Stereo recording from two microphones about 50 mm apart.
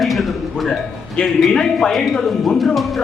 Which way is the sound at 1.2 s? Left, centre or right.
Left.